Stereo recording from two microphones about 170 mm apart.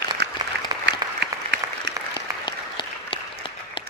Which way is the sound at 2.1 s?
25° left (ahead or behind).